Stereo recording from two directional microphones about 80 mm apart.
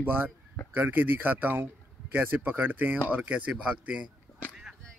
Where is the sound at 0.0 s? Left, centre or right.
Right.